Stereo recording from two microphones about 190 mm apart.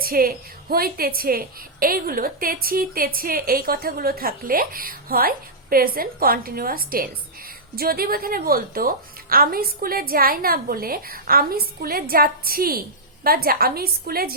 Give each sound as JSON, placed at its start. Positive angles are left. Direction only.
{"t": 0.0, "sound": "a woman's voice", "side_deg": -50}